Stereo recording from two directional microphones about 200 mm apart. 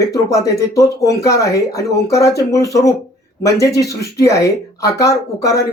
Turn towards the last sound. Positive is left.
turn(degrees=15)  # may be behind; listen again after turning